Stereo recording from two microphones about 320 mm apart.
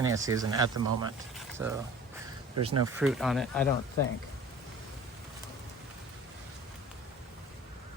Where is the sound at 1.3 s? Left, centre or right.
Centre.